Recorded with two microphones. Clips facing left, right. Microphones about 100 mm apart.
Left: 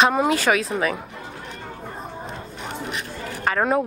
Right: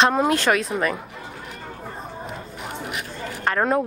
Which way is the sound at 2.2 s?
30° left (ahead or behind).